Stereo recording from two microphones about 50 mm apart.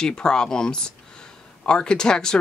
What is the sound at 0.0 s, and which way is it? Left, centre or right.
Speech, centre.